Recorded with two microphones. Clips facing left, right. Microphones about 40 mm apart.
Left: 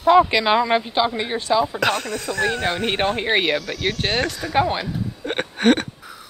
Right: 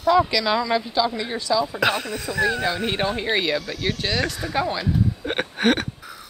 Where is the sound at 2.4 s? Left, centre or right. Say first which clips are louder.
Even; left.